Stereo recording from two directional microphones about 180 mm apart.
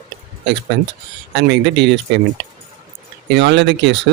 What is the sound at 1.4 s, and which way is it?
Speech, 75° right (ahead or behind).